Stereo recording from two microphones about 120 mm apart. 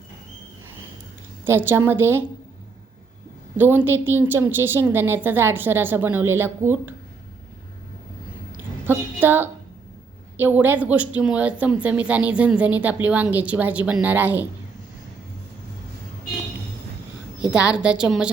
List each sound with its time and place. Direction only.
1.5 s a woman's voice: 20° right (ahead or behind)
3.6 s a woman's voice: 15° right (ahead or behind)
8.9 s a woman's voice: 15° right (ahead or behind)
17.5 s a woman's voice: 10° right (ahead or behind)